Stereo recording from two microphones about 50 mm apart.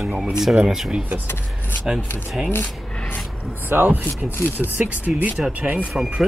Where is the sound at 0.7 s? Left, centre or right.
Centre.